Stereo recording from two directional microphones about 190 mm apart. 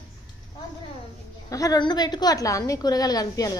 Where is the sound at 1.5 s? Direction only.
20° left (ahead or behind).